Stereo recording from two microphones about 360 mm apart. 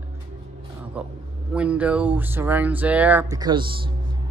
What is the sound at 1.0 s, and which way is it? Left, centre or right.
A man's voice, centre.